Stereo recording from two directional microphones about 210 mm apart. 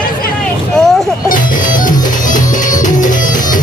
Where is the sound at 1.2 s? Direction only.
40° left (ahead or behind).